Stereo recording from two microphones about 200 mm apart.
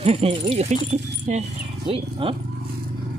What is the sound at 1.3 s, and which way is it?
Hoot, 35° right (ahead or behind).